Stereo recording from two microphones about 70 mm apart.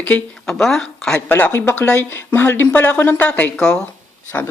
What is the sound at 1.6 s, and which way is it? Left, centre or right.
Speech, left.